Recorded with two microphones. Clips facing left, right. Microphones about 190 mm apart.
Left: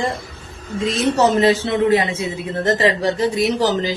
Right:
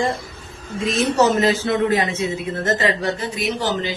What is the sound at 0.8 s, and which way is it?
A man's voice, 25° left (ahead or behind).